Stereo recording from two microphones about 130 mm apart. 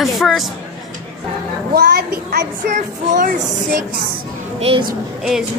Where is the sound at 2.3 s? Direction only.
80° right.